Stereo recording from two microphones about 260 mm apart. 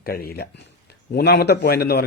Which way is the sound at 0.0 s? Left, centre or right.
Left.